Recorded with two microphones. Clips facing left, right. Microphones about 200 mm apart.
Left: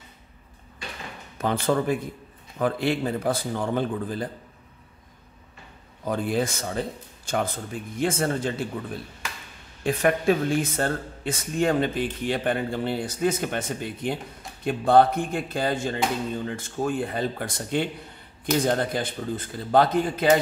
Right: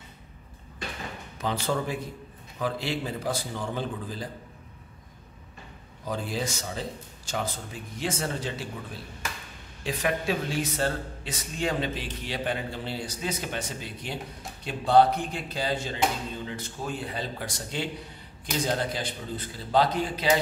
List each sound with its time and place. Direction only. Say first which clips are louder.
1.4 s speech: left 5 dB; 55° left (ahead or behind)
6.0 s speech: left 6 dB; 55° left (ahead or behind)
9.8 s speech: left 7 dB; 50° left (ahead or behind)